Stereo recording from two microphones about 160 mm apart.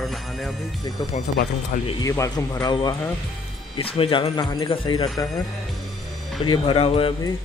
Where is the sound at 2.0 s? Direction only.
20° left (ahead or behind).